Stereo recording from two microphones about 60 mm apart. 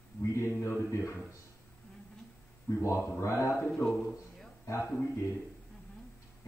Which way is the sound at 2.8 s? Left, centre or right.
Left.